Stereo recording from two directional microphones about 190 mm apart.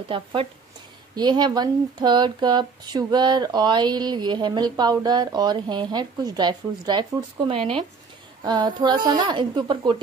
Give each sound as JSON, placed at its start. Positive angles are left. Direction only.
{"t": 0.1, "sound": "speech", "side_deg": -25}